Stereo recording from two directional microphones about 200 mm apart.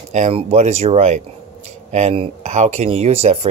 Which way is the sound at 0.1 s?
30° right (ahead or behind).